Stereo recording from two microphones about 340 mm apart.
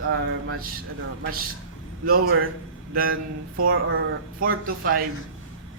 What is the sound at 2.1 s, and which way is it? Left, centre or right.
Speech, right.